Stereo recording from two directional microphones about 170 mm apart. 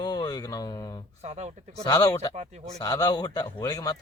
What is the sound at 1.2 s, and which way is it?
Speech, 40° right (ahead or behind).